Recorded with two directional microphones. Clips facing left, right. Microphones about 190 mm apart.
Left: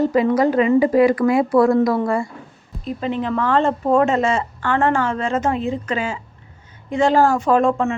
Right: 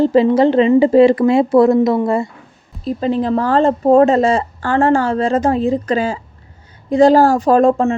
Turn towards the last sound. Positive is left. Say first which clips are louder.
# right 5 dB
turn(degrees=-35)  # may be behind; listen again after turning